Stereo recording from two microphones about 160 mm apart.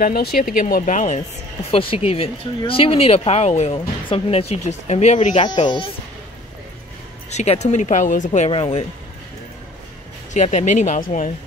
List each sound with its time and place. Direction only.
0.0 s speech: 75° left (ahead or behind); by 1.2 s 50° left (ahead or behind)
1.7 s speech: 35° left (ahead or behind)
5.4 s speech: 30° left (ahead or behind)
7.2 s speech: 45° left (ahead or behind)
10.3 s speech: 50° left (ahead or behind)